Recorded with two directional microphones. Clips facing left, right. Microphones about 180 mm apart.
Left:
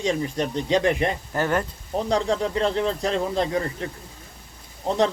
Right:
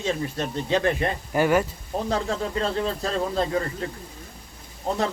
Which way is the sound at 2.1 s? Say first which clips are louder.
Left 4 dB; 15° left (ahead or behind).